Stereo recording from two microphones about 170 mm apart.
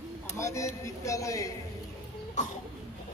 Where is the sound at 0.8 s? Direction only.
20° left (ahead or behind).